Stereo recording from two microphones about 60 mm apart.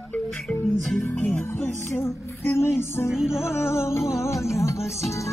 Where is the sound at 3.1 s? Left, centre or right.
Centre.